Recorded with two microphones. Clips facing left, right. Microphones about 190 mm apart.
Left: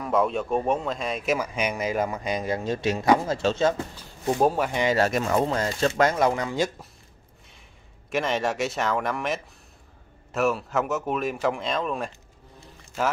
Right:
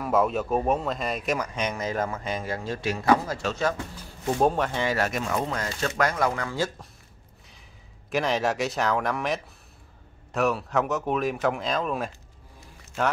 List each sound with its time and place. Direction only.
0.0 s speech: centre (ahead or behind); by 3.8 s 25° left (ahead or behind)
4.4 s speech: 5° left (ahead or behind)
4.9 s speech: 35° left (ahead or behind); by 6.7 s 20° left (ahead or behind)
8.1 s speech: centre (ahead or behind)